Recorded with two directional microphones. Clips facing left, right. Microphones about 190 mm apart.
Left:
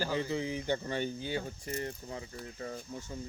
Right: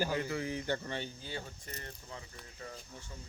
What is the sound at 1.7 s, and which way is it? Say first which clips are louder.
Speech: left 10 dB; 35° left (ahead or behind).